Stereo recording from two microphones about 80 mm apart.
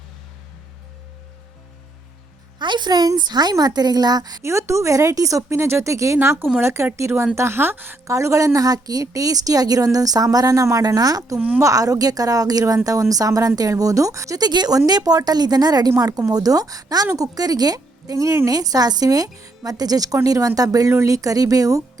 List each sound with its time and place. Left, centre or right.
2.6 s a woman's voice: right
4.4 s a woman's voice: right
6.1 s a woman's voice: right
8.0 s a woman's voice: right
11.3 s speech: centre
11.6 s a woman's voice: right
14.4 s a woman's voice: right